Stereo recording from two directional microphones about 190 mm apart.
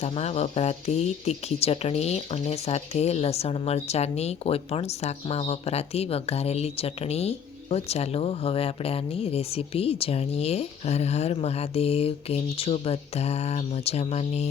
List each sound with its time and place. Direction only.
0.0 s speech: 35° left (ahead or behind)